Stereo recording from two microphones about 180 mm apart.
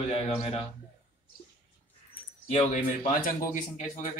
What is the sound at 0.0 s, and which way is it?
Speech, 35° left (ahead or behind).